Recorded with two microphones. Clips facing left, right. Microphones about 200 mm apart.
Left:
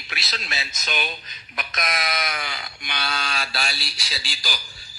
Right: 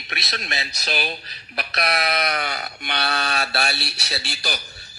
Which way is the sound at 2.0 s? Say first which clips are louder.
Right 5 dB; 65° right (ahead or behind).